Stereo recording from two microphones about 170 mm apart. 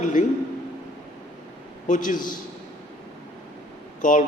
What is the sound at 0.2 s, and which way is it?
Speech, 50° left (ahead or behind).